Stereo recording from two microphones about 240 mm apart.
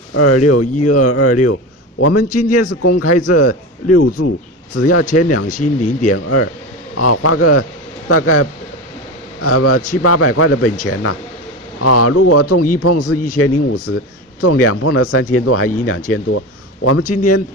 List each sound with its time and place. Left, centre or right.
0.1 s a man's voice: left
5.6 s speech: left
5.9 s a man's voice: left
17.1 s a man's voice: left